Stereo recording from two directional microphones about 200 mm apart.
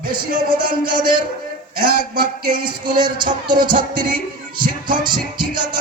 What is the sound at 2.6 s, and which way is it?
Music, 20° right (ahead or behind).